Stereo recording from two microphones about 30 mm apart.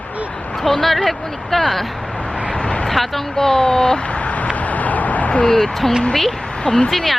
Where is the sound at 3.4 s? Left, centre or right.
Centre.